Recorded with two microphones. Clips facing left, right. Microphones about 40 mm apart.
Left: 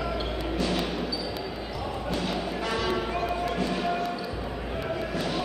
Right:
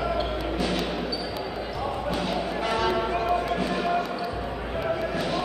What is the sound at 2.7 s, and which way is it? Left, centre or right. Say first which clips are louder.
Basketball bounce: right 4 dB; centre.